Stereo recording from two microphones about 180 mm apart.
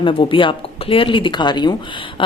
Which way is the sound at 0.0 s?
30° left (ahead or behind).